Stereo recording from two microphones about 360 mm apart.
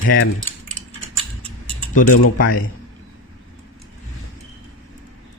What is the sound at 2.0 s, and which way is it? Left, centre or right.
Speech, left.